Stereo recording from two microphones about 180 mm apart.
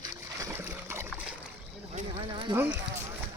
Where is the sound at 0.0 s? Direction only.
15° right (ahead or behind).